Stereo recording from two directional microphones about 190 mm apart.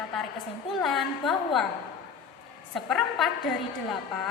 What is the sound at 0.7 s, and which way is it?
Speech, centre (ahead or behind).